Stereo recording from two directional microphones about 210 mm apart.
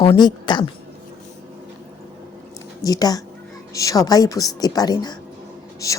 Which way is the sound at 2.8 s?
15° left (ahead or behind).